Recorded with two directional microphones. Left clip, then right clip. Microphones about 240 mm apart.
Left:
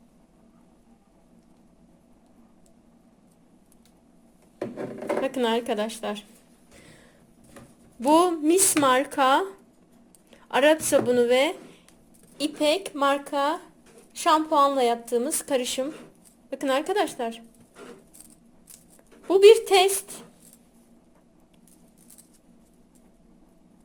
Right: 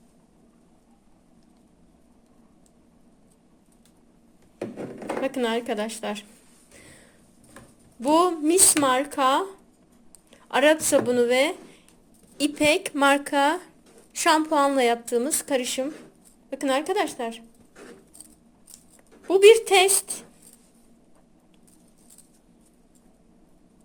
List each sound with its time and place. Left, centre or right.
5.2 s speech: centre
8.0 s speech: centre
12.5 s a woman's voice: centre
19.2 s a woman's voice: centre